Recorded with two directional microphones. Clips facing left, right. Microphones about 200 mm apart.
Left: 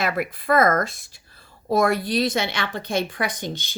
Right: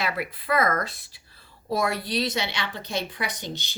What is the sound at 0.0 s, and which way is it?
A woman's voice, 45° left (ahead or behind).